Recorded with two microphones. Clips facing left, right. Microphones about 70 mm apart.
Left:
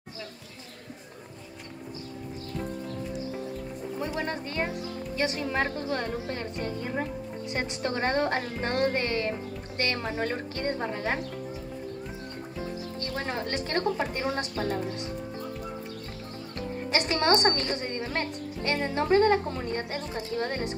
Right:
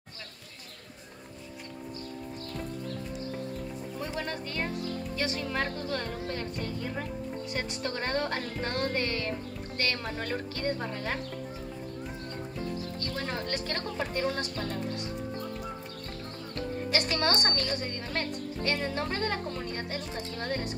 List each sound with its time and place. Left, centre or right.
4.0 s a woman's voice: left
13.0 s a woman's voice: left
16.9 s a woman's voice: left